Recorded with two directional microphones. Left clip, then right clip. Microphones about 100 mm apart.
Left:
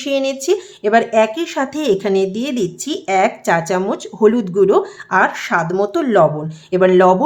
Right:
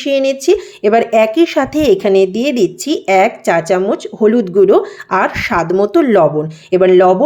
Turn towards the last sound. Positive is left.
turn(degrees=-20)  # may be behind; listen again after turning